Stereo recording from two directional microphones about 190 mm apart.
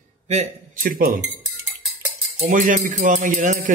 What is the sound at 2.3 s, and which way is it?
Music, 40° right (ahead or behind).